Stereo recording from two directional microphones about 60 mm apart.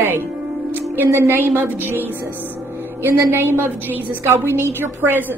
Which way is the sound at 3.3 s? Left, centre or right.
Right.